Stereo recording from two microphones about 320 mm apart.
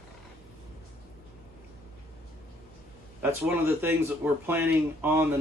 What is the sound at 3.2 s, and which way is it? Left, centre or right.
Speech, centre.